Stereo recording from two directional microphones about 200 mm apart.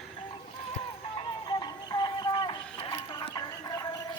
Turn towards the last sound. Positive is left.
turn(degrees=20)  # may be behind; listen again after turning